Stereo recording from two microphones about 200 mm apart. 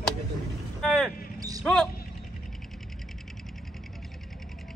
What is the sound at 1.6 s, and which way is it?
Speech, centre (ahead or behind).